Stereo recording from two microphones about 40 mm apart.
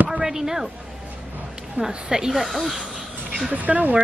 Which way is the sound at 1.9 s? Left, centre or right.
Centre.